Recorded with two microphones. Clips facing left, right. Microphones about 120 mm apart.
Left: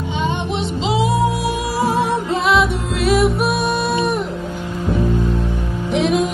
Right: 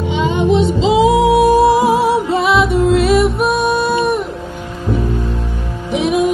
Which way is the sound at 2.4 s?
Centre (ahead or behind).